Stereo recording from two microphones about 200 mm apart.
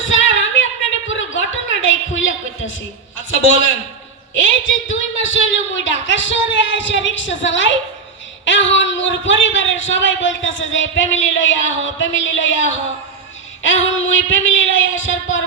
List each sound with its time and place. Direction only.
0.0 s a sound: 75° left (ahead or behind)
3.2 s a man's voice: 75° left (ahead or behind)
13.6 s a man's voice: 70° left (ahead or behind)